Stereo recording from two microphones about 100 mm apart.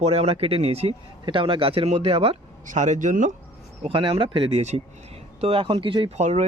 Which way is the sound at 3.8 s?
60° right (ahead or behind).